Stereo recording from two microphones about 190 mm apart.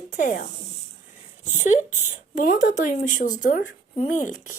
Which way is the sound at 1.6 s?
40° left (ahead or behind).